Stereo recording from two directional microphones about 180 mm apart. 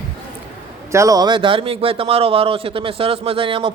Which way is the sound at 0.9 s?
20° right (ahead or behind).